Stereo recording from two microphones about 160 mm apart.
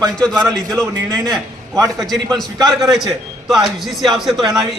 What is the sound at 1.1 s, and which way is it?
Speech, 20° right (ahead or behind).